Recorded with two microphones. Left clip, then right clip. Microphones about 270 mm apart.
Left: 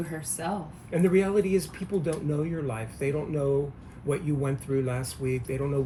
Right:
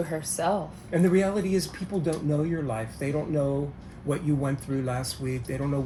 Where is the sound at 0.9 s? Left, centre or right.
Centre.